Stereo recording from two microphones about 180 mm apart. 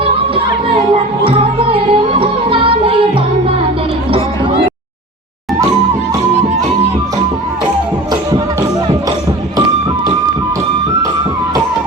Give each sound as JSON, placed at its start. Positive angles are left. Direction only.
{"t": 1.6, "sound": "music", "side_deg": -30}